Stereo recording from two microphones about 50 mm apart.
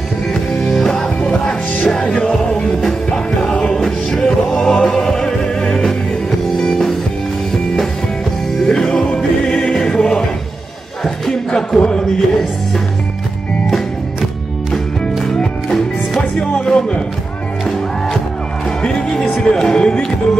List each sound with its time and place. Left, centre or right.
0.3 s music: centre
8.6 s music: centre
11.2 s music: centre
11.8 s a sound: centre
14.7 s music: centre
18.8 s music: centre